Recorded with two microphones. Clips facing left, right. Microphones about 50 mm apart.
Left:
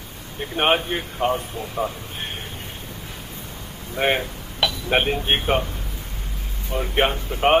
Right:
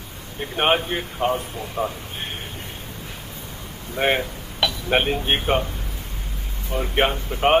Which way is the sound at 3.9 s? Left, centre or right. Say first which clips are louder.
Even; centre.